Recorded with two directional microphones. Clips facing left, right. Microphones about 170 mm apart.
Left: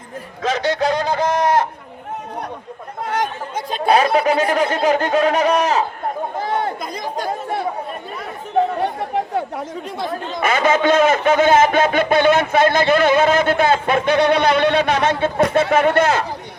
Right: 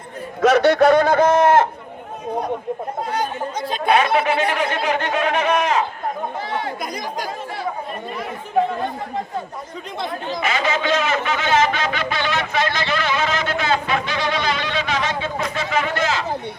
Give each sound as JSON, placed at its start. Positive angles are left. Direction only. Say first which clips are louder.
{"t": 0.5, "sound": "speech", "louder": "right 5 dB", "side_deg": -55}
{"t": 3.7, "sound": "speech", "louder": "left 2 dB", "side_deg": 35}
{"t": 6.4, "sound": "chatter", "louder": "left 7 dB", "side_deg": 50}
{"t": 8.8, "sound": "chatter", "louder": "left 4 dB", "side_deg": 70}
{"t": 10.1, "sound": "a man's voice", "louder": "left 3 dB", "side_deg": 50}